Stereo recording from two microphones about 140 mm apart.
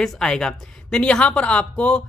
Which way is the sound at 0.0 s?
5° left (ahead or behind).